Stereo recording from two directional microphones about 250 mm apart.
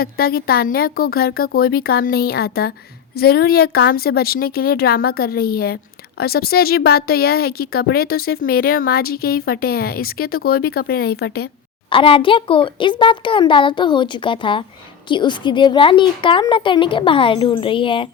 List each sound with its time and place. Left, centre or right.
0.0 s a woman's voice: left
11.9 s speech: left